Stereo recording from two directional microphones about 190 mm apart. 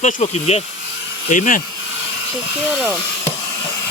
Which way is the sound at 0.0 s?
35° left (ahead or behind).